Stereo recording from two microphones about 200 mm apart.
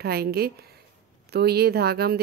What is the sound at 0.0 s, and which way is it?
Speech, 50° right (ahead or behind).